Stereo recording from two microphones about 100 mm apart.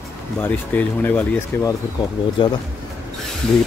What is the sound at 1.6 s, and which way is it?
Speech, 35° left (ahead or behind).